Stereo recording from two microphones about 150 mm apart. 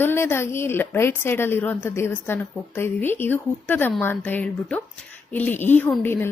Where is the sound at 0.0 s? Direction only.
15° left (ahead or behind).